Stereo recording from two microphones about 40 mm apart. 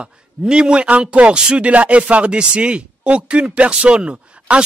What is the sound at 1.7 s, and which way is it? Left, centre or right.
Speech, right.